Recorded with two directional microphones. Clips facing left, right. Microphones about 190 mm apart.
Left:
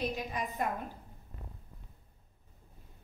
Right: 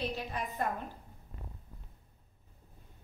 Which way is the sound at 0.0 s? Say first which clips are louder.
Left 1 dB; 15° left (ahead or behind).